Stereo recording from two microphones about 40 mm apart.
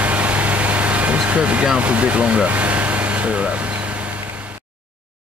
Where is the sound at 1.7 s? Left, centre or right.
Right.